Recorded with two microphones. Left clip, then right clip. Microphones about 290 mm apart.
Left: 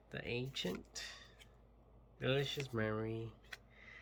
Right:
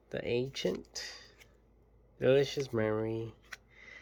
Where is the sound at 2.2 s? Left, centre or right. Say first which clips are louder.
Right 10 dB; centre.